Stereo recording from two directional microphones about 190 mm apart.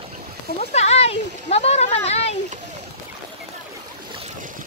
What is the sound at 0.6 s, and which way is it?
Speech, 35° left (ahead or behind).